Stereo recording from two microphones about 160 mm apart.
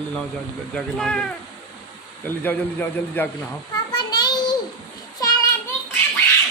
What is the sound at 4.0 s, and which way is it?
Child singing, 25° left (ahead or behind).